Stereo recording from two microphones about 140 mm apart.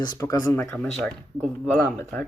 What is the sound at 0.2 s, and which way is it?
Speech, 20° left (ahead or behind).